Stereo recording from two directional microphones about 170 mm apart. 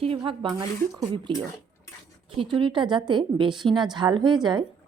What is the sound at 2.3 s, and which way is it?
Speech, 30° right (ahead or behind).